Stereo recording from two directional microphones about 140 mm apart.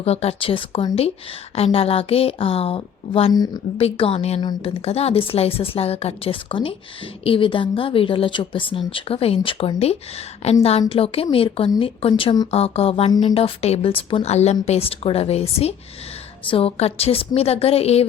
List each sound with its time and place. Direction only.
0.0 s a woman's voice: 45° left (ahead or behind)
3.3 s a woman's voice: 30° left (ahead or behind)
3.8 s a woman's voice: 40° left (ahead or behind)
4.4 s a woman's voice: 30° left (ahead or behind)
4.9 s a woman's voice: 45° left (ahead or behind)
12.5 s a woman's voice: 45° left (ahead or behind)